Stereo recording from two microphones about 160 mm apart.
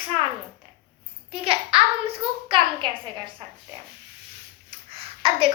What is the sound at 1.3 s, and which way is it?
A child's voice, 35° right (ahead or behind).